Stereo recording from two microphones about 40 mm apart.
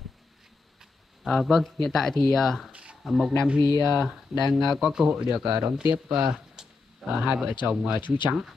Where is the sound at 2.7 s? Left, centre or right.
Right.